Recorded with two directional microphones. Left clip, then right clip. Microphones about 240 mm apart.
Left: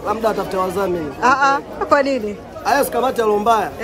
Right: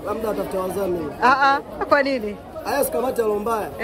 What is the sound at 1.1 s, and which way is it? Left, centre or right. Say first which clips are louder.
Speech: left 2 dB; centre.